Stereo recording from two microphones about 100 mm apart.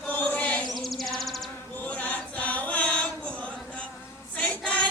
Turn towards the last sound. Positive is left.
turn(degrees=15)  # may be behind; listen again after turning